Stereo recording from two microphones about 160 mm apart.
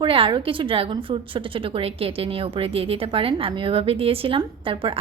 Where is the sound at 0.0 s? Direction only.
30° right (ahead or behind).